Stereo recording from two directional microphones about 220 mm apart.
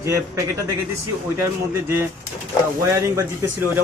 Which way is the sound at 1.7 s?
10° right (ahead or behind).